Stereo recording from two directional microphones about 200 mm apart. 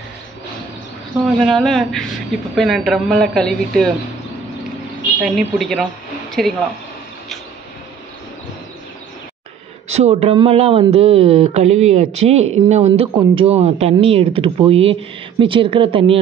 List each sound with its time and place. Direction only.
1.2 s speech: centre (ahead or behind)
5.2 s speech: centre (ahead or behind)
9.9 s speech: 30° right (ahead or behind)